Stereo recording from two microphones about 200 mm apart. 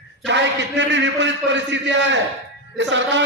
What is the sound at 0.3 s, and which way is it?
A man's voice, 60° right (ahead or behind).